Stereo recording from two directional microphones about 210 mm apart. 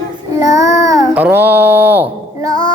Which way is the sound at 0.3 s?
15° right (ahead or behind).